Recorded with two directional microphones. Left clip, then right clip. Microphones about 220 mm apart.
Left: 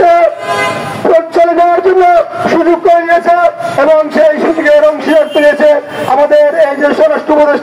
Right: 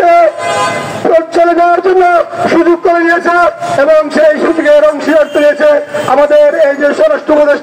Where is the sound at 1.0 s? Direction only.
45° right (ahead or behind).